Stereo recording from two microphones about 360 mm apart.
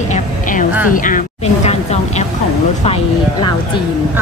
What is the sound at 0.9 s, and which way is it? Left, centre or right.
Speech, left.